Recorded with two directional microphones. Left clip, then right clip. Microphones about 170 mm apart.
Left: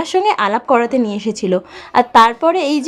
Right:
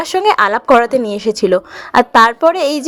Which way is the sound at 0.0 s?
30° right (ahead or behind).